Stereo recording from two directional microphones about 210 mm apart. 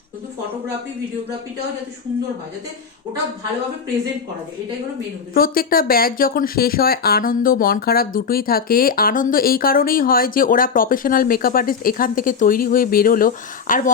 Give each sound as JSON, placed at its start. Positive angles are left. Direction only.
{"t": 5.3, "sound": "speech", "side_deg": 45}